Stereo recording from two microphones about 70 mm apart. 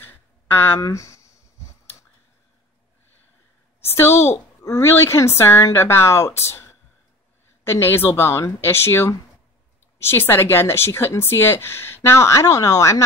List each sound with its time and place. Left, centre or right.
0.0 s a sound: left
0.7 s speech: left
3.8 s speech: left